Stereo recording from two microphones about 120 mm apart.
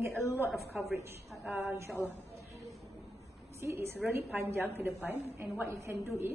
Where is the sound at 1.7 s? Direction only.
20° right (ahead or behind).